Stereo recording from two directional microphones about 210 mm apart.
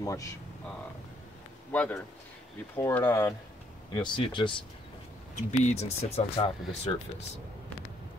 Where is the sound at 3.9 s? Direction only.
20° left (ahead or behind).